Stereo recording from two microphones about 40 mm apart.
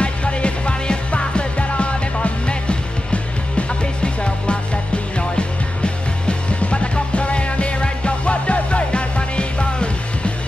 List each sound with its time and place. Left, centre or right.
0.0 s music: left
6.2 s music: left